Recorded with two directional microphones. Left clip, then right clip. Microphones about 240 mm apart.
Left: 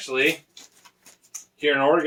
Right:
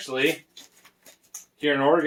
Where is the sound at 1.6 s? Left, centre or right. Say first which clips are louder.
Left 2 dB; centre.